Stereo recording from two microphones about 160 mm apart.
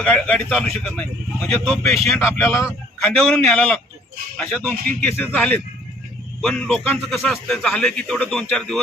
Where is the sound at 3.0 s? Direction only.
5° left (ahead or behind).